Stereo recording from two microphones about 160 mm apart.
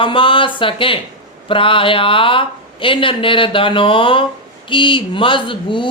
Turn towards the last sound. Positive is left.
turn(degrees=30)  # may be behind; listen again after turning